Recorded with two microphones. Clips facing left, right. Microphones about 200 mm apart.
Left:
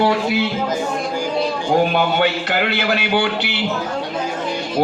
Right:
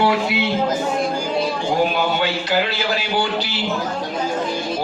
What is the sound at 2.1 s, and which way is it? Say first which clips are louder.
A man's voice: left 1 dB; 60° left (ahead or behind).